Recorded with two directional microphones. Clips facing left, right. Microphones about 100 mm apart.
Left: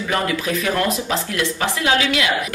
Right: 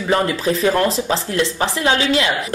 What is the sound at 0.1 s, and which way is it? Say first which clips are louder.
A woman's voice: right 4 dB; 30° right (ahead or behind).